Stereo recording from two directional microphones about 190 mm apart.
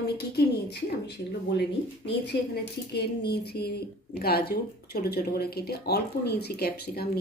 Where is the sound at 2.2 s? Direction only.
60° left (ahead or behind).